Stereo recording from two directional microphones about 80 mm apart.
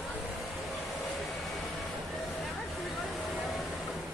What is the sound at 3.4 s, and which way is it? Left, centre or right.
Vehicle, centre.